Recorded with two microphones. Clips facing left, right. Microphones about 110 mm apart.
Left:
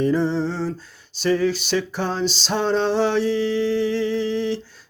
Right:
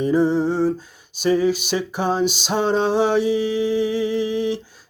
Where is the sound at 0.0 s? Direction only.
10° right (ahead or behind).